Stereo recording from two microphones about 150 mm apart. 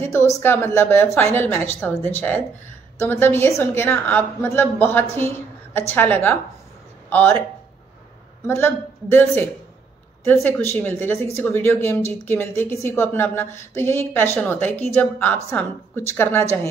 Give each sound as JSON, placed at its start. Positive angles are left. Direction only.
{"t": 0.0, "sound": "a woman's voice", "side_deg": 15}
{"t": 8.5, "sound": "a woman's voice", "side_deg": 15}